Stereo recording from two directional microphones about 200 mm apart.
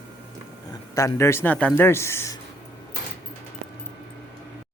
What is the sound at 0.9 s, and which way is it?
A man's voice, 15° left (ahead or behind).